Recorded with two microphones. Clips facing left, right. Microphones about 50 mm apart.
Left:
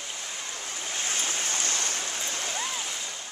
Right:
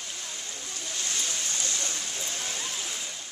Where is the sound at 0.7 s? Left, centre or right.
Left.